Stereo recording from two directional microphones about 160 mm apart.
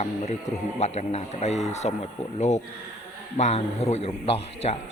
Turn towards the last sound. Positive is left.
turn(degrees=40)  # may be behind; listen again after turning